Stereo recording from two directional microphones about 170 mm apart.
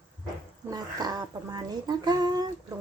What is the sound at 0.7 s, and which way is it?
A child's voice, 25° right (ahead or behind).